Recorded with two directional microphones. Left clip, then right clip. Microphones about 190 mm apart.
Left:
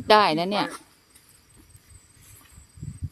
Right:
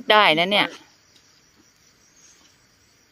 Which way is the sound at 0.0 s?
Centre (ahead or behind).